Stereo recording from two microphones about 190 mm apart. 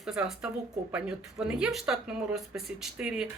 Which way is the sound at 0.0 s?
Centre (ahead or behind).